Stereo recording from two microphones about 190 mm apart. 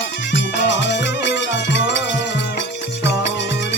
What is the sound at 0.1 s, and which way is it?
Music, 70° left (ahead or behind).